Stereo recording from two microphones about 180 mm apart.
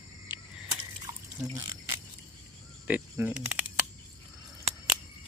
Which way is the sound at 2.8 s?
10° right (ahead or behind).